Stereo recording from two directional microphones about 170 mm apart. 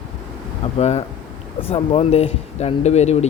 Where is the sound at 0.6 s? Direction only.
40° left (ahead or behind).